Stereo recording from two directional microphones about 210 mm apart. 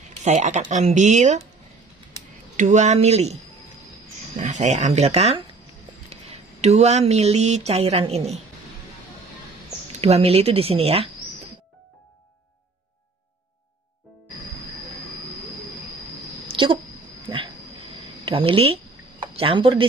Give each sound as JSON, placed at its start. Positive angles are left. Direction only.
{"t": 0.2, "sound": "speech", "side_deg": -35}
{"t": 2.5, "sound": "speech", "side_deg": -35}
{"t": 4.4, "sound": "speech", "side_deg": -35}
{"t": 9.9, "sound": "speech", "side_deg": -30}
{"t": 16.4, "sound": "a sound", "side_deg": -25}
{"t": 18.2, "sound": "speech", "side_deg": -25}